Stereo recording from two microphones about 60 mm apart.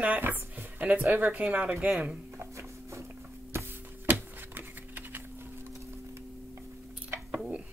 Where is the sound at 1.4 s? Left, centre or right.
Centre.